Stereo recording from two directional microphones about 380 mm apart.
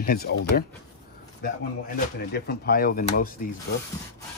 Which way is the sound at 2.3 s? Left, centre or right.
Left.